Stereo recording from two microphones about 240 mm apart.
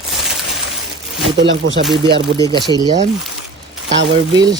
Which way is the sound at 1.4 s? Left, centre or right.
Right.